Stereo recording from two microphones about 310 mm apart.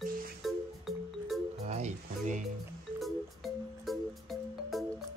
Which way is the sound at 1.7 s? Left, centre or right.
Right.